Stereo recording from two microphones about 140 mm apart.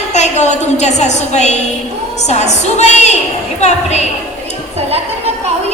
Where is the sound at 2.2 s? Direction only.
55° left (ahead or behind).